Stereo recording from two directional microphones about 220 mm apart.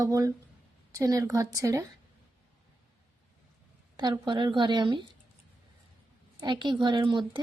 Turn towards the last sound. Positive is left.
turn(degrees=-20)  # may be behind; listen again after turning